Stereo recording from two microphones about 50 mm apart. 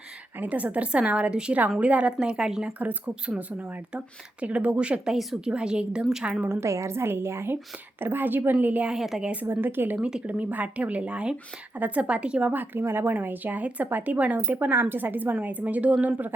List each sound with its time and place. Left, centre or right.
0.3 s speech: right
2.6 s speech: right
6.5 s a woman's voice: right
8.5 s speech: right
8.9 s a woman's voice: centre
9.2 s speech: right
9.5 s a woman's voice: right
10.0 s speech: centre
12.5 s speech: right